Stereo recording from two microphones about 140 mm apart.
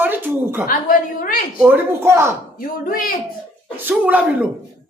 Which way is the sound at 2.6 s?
90° left.